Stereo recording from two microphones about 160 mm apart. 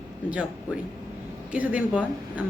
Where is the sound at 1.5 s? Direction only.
10° right (ahead or behind).